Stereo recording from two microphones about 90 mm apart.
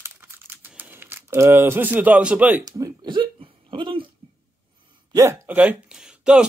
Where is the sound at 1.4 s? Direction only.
25° right (ahead or behind).